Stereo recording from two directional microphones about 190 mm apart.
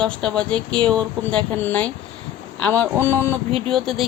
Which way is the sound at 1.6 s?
10° left (ahead or behind).